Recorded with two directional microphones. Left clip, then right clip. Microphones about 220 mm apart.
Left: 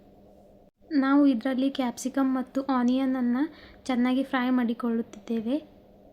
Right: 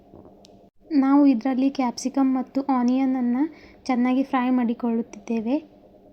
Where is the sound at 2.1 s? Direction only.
5° right (ahead or behind).